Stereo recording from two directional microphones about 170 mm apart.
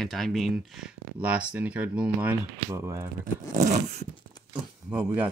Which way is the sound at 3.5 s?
45° right (ahead or behind).